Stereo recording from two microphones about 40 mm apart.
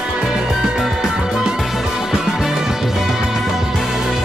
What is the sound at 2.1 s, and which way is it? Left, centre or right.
Music, centre.